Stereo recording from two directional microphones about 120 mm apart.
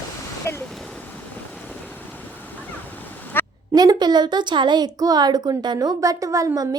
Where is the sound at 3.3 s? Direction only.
20° left (ahead or behind).